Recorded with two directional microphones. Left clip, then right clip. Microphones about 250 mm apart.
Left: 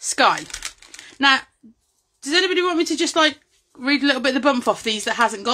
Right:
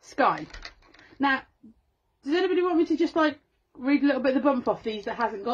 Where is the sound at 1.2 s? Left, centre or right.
Centre.